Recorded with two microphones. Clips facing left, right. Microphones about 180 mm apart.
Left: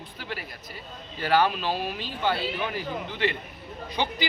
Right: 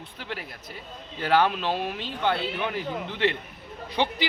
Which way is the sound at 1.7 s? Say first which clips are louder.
Right 1 dB; 20° right (ahead or behind).